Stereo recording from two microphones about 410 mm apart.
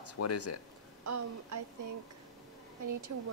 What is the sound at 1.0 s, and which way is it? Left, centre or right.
Speech, right.